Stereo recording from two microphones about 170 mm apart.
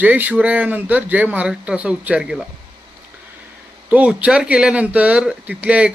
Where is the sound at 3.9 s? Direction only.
5° right (ahead or behind).